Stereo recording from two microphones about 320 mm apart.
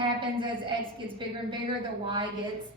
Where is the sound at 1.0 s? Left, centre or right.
Centre.